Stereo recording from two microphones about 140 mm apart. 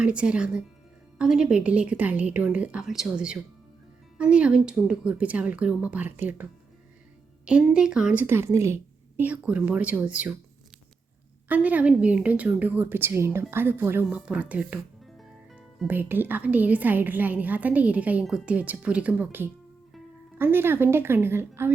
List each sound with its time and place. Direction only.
0.0 s a woman's voice: 5° right (ahead or behind)
11.4 s a woman's voice: 10° right (ahead or behind)
15.2 s music: 5° right (ahead or behind)
15.9 s a woman's voice: 15° right (ahead or behind)